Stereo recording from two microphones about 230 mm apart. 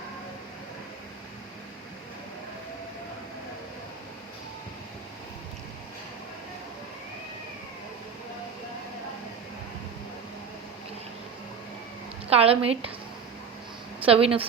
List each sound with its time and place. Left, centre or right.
12.3 s a woman's voice: right
14.0 s a woman's voice: right